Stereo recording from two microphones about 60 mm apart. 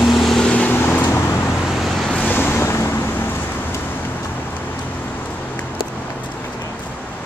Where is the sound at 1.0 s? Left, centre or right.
Left.